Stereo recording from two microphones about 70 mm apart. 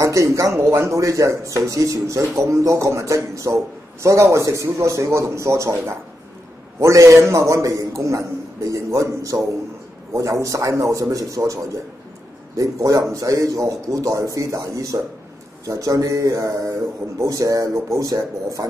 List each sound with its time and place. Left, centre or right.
0.0 s a man's voice: right